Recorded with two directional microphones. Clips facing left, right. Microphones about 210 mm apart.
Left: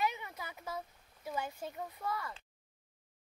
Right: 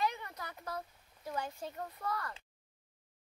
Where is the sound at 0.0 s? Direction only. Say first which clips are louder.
Even; 5° left (ahead or behind).